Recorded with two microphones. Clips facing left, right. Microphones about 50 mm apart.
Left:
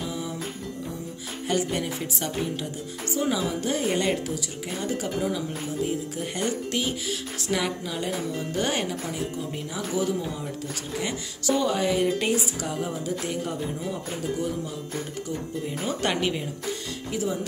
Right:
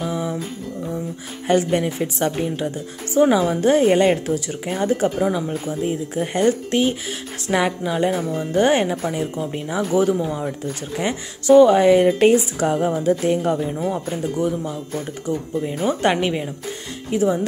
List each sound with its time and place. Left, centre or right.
0.1 s music: right
1.5 s a woman's voice: right
13.8 s speech: right
15.8 s speech: right